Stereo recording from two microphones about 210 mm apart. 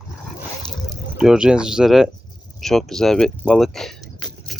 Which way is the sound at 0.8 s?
5° right (ahead or behind).